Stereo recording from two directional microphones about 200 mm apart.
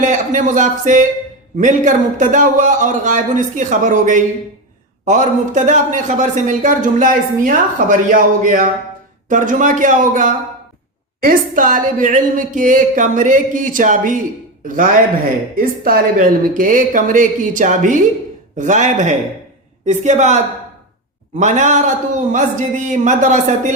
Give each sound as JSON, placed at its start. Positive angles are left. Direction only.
{"t": 0.0, "sound": "a man's voice", "side_deg": -40}